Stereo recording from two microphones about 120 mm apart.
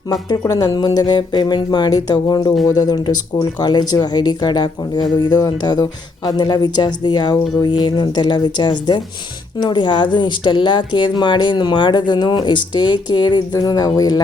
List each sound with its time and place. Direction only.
0.1 s speech: 30° left (ahead or behind)